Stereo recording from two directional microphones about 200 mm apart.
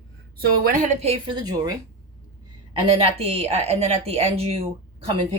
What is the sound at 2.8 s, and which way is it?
Speech, 30° right (ahead or behind).